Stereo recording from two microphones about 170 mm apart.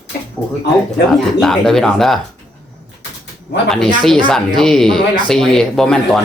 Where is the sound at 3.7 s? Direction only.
Centre (ahead or behind).